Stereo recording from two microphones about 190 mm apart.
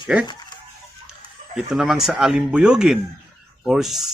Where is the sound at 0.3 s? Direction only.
20° left (ahead or behind).